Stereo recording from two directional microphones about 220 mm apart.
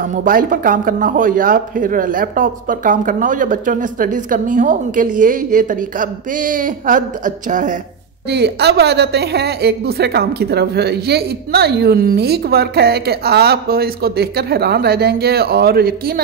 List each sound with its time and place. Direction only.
0.1 s speech: 40° right (ahead or behind)
8.3 s a woman's voice: 50° right (ahead or behind)